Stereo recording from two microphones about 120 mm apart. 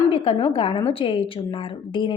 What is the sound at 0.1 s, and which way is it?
A woman's voice, 50° left (ahead or behind).